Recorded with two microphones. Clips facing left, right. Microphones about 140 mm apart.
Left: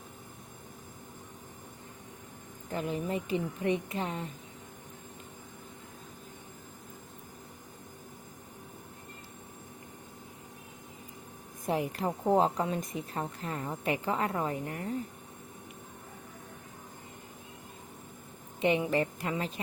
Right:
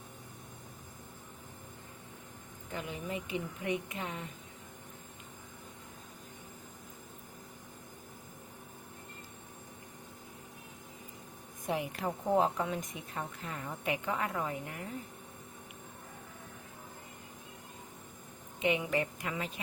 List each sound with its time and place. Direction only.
2.7 s a woman's voice: 40° left (ahead or behind)
11.6 s a woman's voice: 35° left (ahead or behind)
18.6 s a woman's voice: 35° left (ahead or behind)